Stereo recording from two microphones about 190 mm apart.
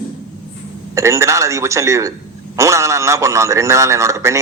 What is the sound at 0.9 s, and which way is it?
A man's voice, 15° right (ahead or behind).